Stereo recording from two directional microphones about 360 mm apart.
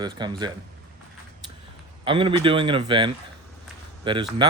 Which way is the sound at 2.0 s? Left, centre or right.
Centre.